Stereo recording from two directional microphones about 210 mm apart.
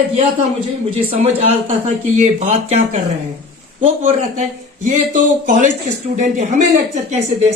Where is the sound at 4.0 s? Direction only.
35° right (ahead or behind).